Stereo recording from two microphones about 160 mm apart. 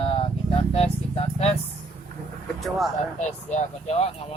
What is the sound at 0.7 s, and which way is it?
Vehicle, 40° left (ahead or behind).